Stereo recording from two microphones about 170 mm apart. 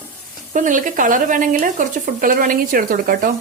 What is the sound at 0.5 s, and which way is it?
Speech, 50° right (ahead or behind).